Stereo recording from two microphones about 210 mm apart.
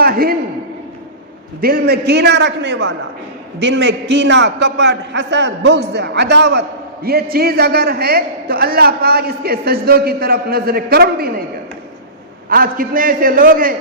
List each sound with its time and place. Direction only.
0.0 s a sound: 45° right (ahead or behind)
1.6 s a man's voice: 50° right (ahead or behind)
12.5 s a man's voice: 45° right (ahead or behind)